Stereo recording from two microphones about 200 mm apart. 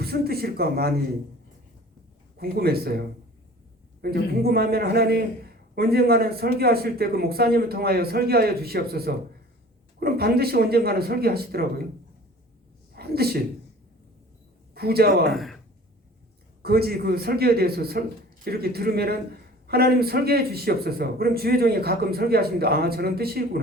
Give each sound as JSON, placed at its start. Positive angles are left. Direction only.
{"t": 0.0, "sound": "speech", "side_deg": -50}
{"t": 2.4, "sound": "speech", "side_deg": -50}
{"t": 4.0, "sound": "speech", "side_deg": -50}
{"t": 12.9, "sound": "a sound", "side_deg": -50}
{"t": 14.7, "sound": "a man's voice", "side_deg": -50}
{"t": 15.3, "sound": "speech", "side_deg": 0}
{"t": 16.6, "sound": "speech", "side_deg": -50}